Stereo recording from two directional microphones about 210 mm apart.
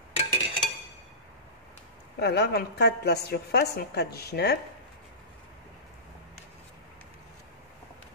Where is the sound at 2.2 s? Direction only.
50° left (ahead or behind).